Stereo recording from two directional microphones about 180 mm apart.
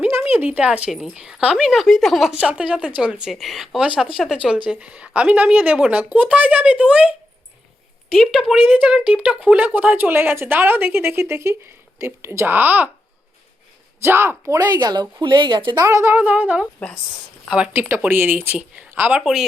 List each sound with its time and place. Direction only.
0.0 s speech: 10° right (ahead or behind)
14.0 s speech: 15° right (ahead or behind)